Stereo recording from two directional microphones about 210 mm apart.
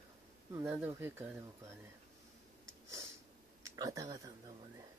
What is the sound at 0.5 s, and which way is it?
Speech, 10° right (ahead or behind).